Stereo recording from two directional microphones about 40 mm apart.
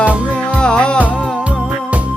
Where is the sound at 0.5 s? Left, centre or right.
Left.